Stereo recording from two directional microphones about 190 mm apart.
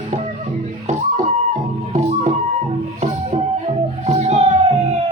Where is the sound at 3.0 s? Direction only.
35° right (ahead or behind).